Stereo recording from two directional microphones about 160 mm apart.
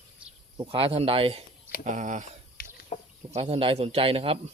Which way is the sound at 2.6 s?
65° left (ahead or behind).